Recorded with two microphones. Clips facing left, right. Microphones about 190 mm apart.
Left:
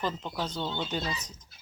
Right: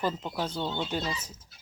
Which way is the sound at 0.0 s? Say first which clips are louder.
Right 2 dB; 10° right (ahead or behind).